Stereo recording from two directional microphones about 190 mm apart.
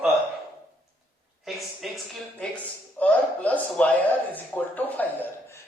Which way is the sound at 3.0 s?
5° left (ahead or behind).